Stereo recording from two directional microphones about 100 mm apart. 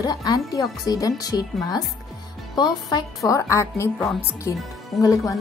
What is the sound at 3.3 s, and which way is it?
A woman's voice, 30° left (ahead or behind).